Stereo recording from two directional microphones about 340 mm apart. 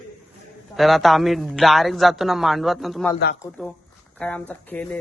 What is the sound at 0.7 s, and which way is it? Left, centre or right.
A man's voice, centre.